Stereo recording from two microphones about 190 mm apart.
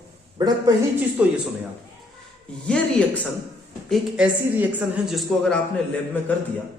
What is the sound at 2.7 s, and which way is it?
A woman's voice, 5° left (ahead or behind).